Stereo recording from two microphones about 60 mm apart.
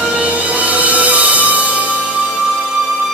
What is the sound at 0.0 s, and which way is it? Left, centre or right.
Music, right.